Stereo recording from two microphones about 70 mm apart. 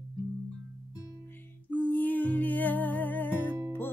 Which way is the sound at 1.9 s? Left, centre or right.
Left.